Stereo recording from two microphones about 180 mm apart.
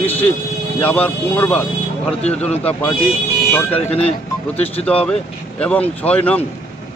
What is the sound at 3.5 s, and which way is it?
Speech, 10° left (ahead or behind).